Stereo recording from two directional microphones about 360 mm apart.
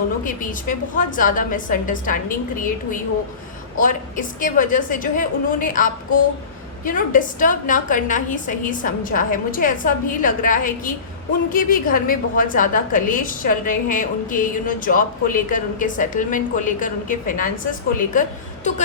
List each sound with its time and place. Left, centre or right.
0.3 s a woman's voice: left
3.8 s a woman's voice: left